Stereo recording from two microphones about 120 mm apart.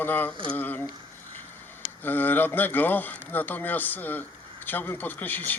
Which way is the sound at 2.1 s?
15° left (ahead or behind).